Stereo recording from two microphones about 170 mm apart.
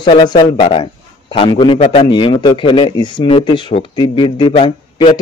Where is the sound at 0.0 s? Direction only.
25° left (ahead or behind).